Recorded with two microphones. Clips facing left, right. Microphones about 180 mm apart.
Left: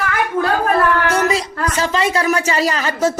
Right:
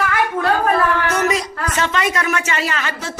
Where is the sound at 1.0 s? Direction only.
30° left (ahead or behind).